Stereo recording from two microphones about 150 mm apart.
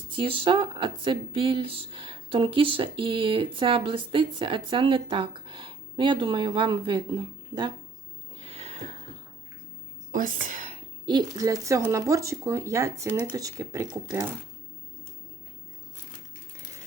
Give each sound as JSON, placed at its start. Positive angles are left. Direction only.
{"t": 0.1, "sound": "speech", "side_deg": -35}
{"t": 8.4, "sound": "a sound", "side_deg": -40}
{"t": 10.1, "sound": "a woman's voice", "side_deg": -60}
{"t": 11.0, "sound": "speech", "side_deg": -30}